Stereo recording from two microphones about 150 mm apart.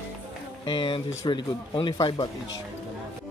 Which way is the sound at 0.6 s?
30° left (ahead or behind).